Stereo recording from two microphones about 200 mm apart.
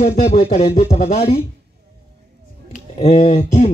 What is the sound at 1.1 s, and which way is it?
Speech, 30° left (ahead or behind).